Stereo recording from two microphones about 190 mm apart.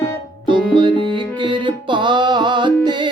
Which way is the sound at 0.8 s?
25° right (ahead or behind).